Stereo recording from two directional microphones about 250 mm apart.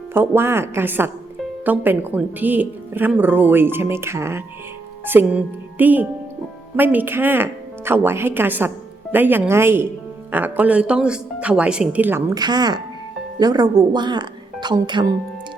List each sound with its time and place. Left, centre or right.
0.1 s speech: centre